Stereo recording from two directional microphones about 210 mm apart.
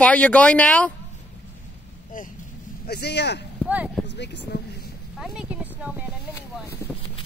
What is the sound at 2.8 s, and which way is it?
Speech, 50° left (ahead or behind).